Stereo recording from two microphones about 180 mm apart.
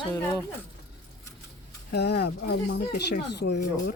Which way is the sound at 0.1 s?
15° left (ahead or behind).